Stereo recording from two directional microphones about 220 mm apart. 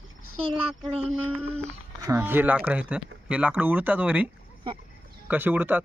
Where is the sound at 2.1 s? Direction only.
10° right (ahead or behind).